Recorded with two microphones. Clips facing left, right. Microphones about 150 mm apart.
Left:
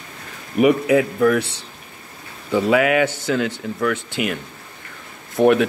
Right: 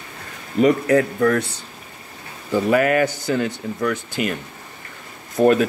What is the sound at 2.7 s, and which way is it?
Speech, 90° left.